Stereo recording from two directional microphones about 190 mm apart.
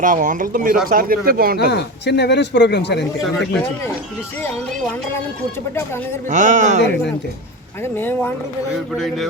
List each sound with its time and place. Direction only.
0.0 s speech: 45° right (ahead or behind)
1.7 s speech: 65° left (ahead or behind)
6.3 s speech: 40° right (ahead or behind)
7.9 s speech: 10° left (ahead or behind)
9.0 s speech: centre (ahead or behind)